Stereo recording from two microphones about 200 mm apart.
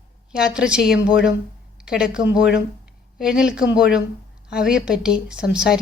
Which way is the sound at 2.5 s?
5° right (ahead or behind).